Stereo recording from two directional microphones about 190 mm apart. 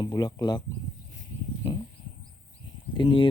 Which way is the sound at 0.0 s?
20° left (ahead or behind).